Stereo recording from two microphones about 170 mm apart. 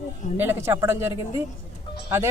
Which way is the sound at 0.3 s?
15° right (ahead or behind).